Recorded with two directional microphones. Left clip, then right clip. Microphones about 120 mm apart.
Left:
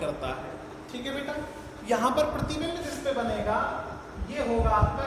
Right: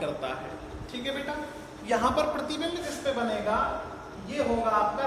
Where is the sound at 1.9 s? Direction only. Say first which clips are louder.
Left 1 dB; 30° left (ahead or behind).